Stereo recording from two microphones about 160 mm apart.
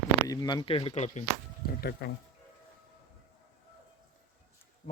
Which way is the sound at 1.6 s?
70° left (ahead or behind).